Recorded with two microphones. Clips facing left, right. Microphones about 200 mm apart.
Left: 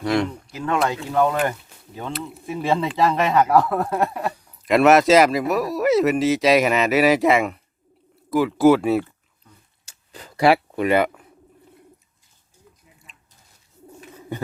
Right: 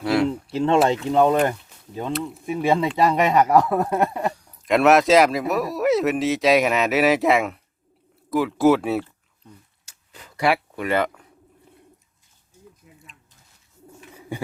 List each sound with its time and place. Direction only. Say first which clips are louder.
0.0 s speech: right 1 dB; 5° right (ahead or behind)
0.5 s speech: right 4 dB; 25° right (ahead or behind)
2.1 s speech: right 4 dB; centre (ahead or behind)
2.5 s speech: right 2 dB; 10° right (ahead or behind)
4.3 s speech: left 1 dB; centre (ahead or behind)
9.8 s a sound: left 5 dB; 35° left (ahead or behind)
10.8 s speech: left 3 dB; 10° left (ahead or behind)
14.1 s bird: left 1 dB; 10° right (ahead or behind)